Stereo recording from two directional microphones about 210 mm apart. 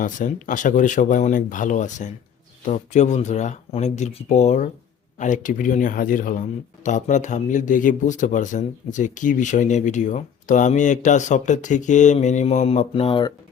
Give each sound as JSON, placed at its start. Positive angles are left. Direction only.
{"t": 0.0, "sound": "speech", "side_deg": 40}